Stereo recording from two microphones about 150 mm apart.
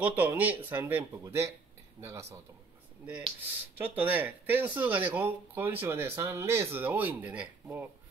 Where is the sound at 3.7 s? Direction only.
10° right (ahead or behind).